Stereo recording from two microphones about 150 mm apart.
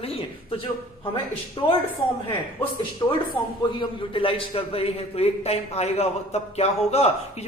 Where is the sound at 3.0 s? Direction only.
20° left (ahead or behind).